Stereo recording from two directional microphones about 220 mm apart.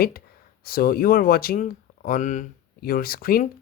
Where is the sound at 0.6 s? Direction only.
45° left (ahead or behind).